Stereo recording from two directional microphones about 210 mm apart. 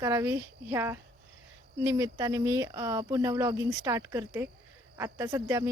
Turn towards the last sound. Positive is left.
turn(degrees=-15)  # may be behind; listen again after turning